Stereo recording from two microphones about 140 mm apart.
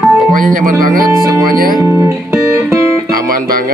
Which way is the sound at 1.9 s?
20° right (ahead or behind).